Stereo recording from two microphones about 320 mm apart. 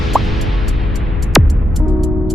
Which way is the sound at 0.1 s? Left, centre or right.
Centre.